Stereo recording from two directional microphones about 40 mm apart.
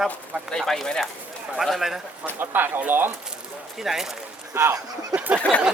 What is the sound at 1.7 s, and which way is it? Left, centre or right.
Speech, centre.